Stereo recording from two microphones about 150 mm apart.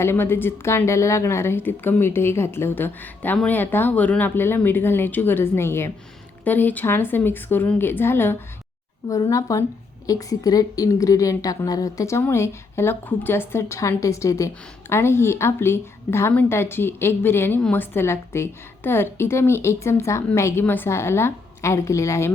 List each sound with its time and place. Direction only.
0.0 s a woman's voice: 15° left (ahead or behind)